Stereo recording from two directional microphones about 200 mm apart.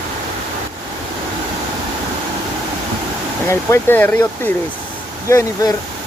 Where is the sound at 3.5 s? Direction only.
10° left (ahead or behind).